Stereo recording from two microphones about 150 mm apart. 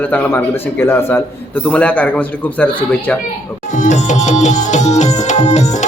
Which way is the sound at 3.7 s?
55° left (ahead or behind).